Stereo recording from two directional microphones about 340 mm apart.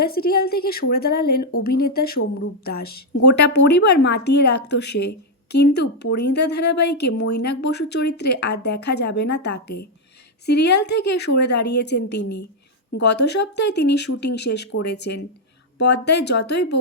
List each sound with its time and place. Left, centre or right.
0.0 s speech: left
10.4 s speech: left
12.1 s a woman's voice: left
13.0 s speech: left